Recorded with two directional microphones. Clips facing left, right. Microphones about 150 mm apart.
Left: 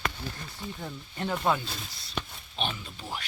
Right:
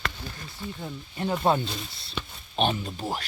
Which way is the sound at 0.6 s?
15° left (ahead or behind).